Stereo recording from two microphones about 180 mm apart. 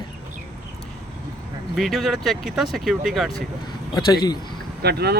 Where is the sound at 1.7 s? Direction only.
Centre (ahead or behind).